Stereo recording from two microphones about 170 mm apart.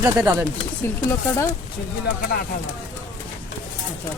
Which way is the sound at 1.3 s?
15° left (ahead or behind).